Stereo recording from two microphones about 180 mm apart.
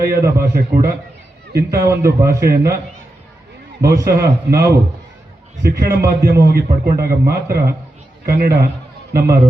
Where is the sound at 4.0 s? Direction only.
60° right (ahead or behind).